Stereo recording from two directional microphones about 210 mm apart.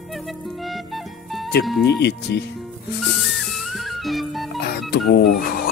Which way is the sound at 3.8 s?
Centre (ahead or behind).